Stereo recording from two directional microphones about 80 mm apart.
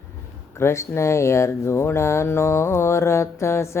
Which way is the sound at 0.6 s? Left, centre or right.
Left.